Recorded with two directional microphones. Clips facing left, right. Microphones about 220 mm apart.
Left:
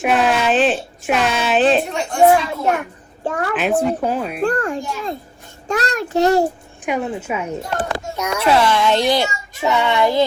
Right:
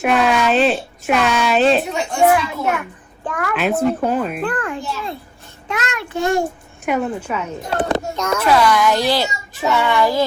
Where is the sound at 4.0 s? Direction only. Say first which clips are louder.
Right 2 dB; 5° left (ahead or behind).